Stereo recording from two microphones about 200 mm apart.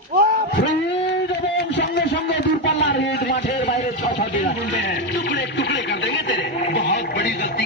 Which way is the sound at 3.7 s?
35° left (ahead or behind).